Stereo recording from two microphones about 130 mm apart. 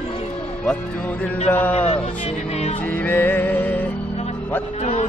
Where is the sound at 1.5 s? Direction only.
15° left (ahead or behind).